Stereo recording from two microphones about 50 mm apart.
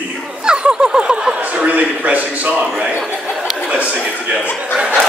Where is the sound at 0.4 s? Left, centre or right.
Centre.